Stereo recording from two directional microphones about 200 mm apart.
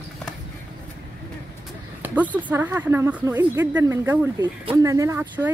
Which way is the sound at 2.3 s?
10° right (ahead or behind).